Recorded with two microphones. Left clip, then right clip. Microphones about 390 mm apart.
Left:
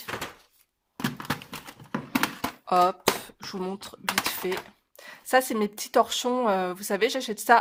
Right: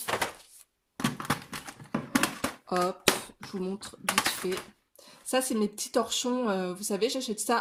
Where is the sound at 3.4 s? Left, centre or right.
Centre.